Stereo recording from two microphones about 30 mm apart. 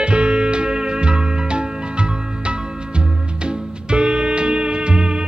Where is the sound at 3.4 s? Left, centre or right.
Right.